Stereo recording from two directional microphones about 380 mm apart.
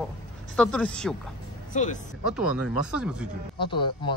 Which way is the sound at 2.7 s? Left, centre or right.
Left.